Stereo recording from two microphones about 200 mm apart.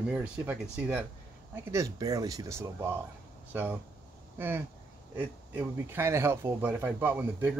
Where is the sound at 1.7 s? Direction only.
15° right (ahead or behind).